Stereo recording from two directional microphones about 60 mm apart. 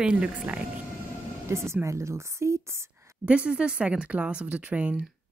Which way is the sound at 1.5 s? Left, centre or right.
Right.